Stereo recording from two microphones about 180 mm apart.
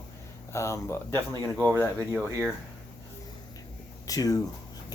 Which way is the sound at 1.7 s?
20° right (ahead or behind).